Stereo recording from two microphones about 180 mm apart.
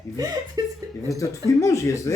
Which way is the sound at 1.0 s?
15° left (ahead or behind).